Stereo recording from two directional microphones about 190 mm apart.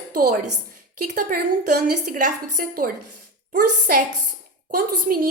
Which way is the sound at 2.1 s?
45° right (ahead or behind).